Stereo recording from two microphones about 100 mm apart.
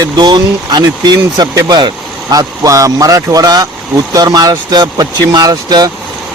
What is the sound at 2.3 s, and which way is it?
Speech, 35° right (ahead or behind).